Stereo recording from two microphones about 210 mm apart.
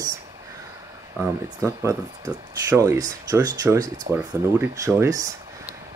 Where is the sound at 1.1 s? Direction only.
10° right (ahead or behind).